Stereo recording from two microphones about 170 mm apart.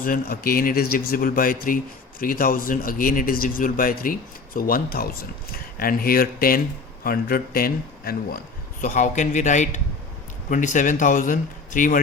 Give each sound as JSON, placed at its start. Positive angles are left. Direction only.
{"t": 0.0, "sound": "speech", "side_deg": 60}
{"t": 8.8, "sound": "speech", "side_deg": 45}